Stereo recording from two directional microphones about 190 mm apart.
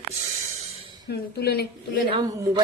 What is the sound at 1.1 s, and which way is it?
Speech, 55° left (ahead or behind).